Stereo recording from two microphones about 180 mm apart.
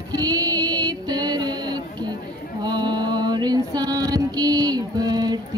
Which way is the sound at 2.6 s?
25° right (ahead or behind).